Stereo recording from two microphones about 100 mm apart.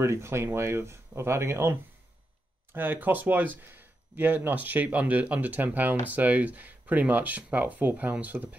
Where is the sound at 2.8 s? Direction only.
20° right (ahead or behind).